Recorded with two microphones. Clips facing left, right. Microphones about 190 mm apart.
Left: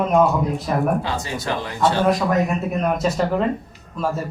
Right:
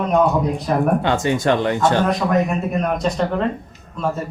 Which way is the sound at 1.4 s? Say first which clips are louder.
Right 9 dB; 80° right.